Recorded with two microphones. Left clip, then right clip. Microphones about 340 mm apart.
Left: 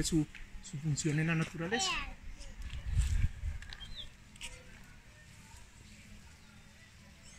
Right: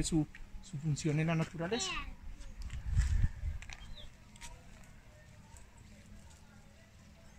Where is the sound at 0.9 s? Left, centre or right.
Centre.